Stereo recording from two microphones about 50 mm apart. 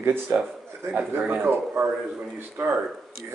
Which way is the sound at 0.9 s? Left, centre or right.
Right.